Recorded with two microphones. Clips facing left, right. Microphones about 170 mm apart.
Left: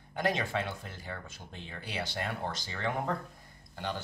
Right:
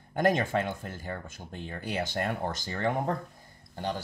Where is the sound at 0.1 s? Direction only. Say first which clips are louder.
Right 6 dB; 50° right (ahead or behind).